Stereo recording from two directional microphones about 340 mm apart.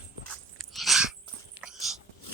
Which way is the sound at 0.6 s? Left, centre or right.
Centre.